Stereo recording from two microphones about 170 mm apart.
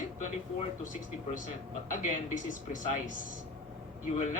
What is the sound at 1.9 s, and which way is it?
Speech, 50° left (ahead or behind).